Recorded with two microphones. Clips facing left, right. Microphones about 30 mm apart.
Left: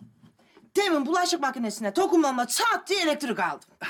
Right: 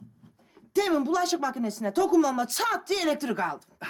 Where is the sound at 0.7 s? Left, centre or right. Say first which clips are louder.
Left 1 dB; left.